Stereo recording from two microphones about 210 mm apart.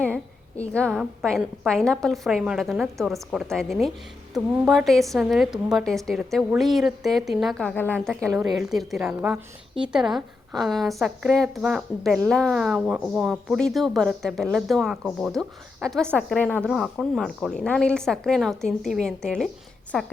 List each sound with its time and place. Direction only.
0.0 s a woman's voice: 5° left (ahead or behind)
8.3 s a woman's voice: 15° right (ahead or behind)
8.7 s a woman's voice: centre (ahead or behind)